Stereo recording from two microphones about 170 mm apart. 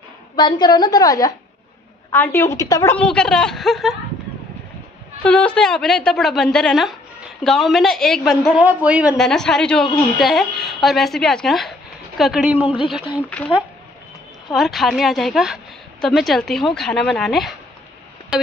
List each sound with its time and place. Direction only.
0.4 s a woman's voice: 25° left (ahead or behind)
3.1 s a woman's voice: 5° left (ahead or behind)
5.2 s a woman's voice: 5° left (ahead or behind)
14.5 s a woman's voice: centre (ahead or behind)
18.3 s a sound: 5° right (ahead or behind)